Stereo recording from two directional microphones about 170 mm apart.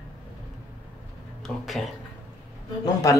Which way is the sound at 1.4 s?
Centre (ahead or behind).